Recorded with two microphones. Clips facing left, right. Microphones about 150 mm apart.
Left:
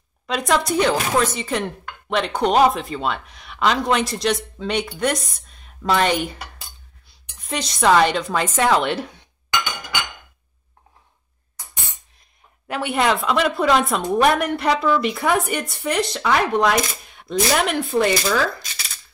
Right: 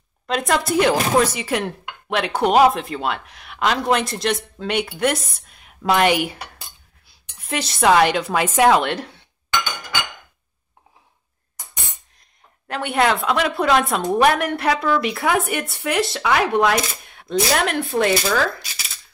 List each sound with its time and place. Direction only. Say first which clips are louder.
0.3 s a woman's voice: even; centre (ahead or behind)
9.0 s chink: left 3 dB; 15° left (ahead or behind)
12.6 s a woman's voice: right 1 dB; 5° left (ahead or behind)